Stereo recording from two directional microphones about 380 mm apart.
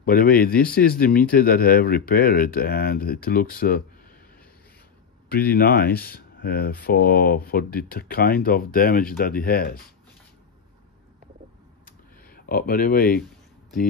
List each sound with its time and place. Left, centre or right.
0.0 s speech: left
5.3 s speech: left
11.8 s computer keyboard: left